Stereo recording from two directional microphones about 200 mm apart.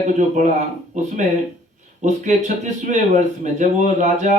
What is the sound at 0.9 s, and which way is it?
Speech, 35° right (ahead or behind).